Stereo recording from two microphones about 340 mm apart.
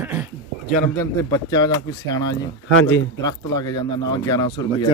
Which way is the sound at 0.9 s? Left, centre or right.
Centre.